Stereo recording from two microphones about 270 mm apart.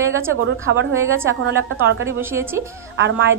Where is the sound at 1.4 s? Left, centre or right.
Right.